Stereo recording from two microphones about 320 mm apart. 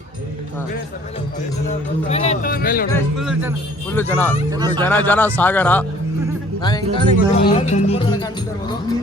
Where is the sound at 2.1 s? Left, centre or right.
Centre.